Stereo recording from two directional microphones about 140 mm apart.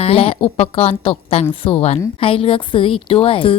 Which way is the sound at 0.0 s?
45° left (ahead or behind).